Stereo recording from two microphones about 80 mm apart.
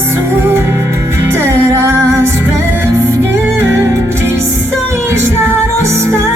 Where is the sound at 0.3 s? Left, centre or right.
Right.